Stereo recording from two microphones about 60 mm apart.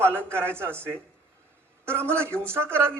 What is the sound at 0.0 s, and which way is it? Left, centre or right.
Speech, right.